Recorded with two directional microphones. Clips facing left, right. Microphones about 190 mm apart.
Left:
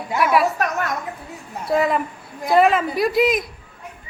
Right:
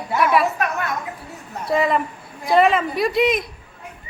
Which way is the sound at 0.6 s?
40° left (ahead or behind).